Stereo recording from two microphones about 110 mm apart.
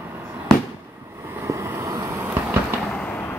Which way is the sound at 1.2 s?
20° right (ahead or behind).